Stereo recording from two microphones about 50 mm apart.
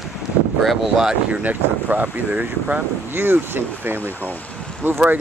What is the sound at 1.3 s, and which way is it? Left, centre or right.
Speech, right.